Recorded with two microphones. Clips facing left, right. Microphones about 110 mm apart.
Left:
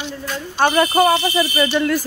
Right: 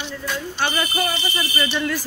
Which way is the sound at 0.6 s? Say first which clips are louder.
Left 10 dB; 50° left (ahead or behind).